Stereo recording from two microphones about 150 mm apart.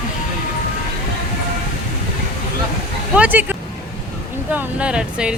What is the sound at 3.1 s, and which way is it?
Speech, 10° right (ahead or behind).